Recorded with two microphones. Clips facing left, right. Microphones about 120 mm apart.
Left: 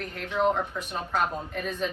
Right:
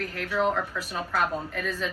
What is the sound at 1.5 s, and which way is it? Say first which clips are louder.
Speech: left 1 dB; 40° left (ahead or behind).